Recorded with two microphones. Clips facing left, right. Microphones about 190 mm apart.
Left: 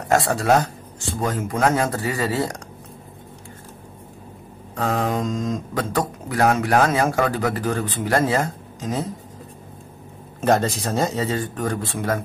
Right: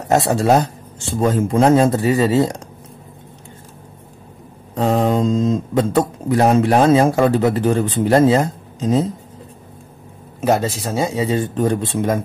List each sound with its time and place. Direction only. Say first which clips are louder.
0.1 s speech: right 4 dB; 20° right (ahead or behind)
4.7 s speech: right 6 dB; 20° right (ahead or behind)
10.4 s speech: right 2 dB; 10° right (ahead or behind)